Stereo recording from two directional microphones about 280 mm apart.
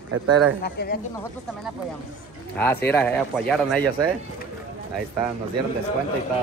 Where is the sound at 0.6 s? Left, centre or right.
Left.